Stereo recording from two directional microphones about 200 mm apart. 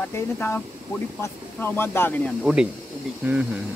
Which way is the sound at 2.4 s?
5° right (ahead or behind).